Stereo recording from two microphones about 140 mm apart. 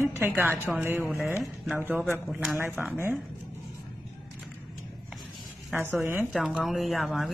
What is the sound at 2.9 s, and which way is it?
Speech, 15° right (ahead or behind).